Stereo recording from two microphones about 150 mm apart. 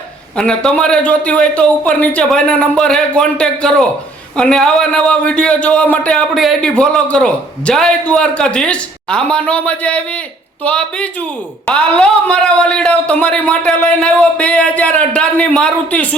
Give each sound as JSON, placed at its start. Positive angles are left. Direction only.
{"t": 0.3, "sound": "a man's voice", "side_deg": 5}